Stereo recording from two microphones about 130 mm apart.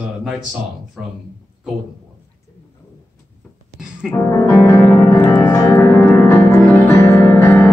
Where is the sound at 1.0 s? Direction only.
5° right (ahead or behind).